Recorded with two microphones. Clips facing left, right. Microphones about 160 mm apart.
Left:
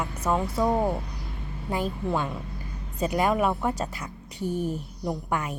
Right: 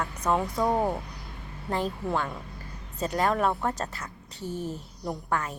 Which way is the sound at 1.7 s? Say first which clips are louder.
Left 1 dB; 10° left (ahead or behind).